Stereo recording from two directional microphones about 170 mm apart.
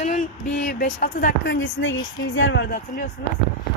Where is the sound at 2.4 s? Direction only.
90° left.